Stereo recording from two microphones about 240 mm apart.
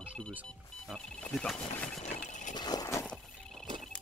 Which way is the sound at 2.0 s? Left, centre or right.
Left.